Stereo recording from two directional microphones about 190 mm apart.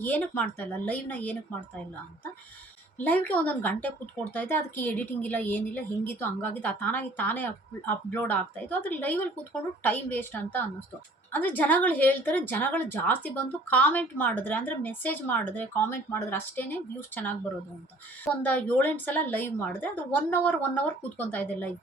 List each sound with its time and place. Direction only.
0.0 s speech: 10° left (ahead or behind)
3.0 s speech: 10° left (ahead or behind)